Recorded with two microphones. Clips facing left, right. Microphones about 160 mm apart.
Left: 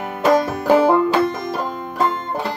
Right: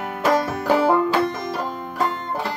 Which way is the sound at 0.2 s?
20° left (ahead or behind).